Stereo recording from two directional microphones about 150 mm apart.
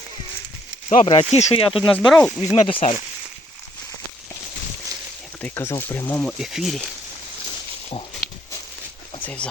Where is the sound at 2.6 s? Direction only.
35° left (ahead or behind).